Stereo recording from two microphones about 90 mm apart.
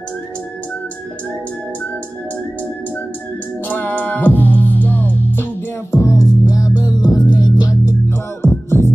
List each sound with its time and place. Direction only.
3.6 s music: 20° left (ahead or behind); by 7.9 s 50° left (ahead or behind)
8.4 s music: 25° left (ahead or behind)